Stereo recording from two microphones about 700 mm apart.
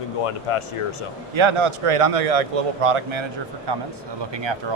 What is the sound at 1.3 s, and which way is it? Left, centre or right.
Speech, right.